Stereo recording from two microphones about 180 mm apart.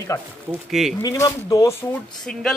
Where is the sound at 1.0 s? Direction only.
20° left (ahead or behind).